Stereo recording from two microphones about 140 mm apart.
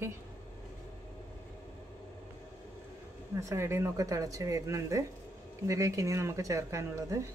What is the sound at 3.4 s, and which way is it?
A woman's voice, 20° right (ahead or behind).